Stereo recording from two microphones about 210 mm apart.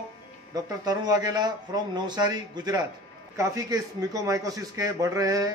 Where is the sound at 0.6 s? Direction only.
20° right (ahead or behind).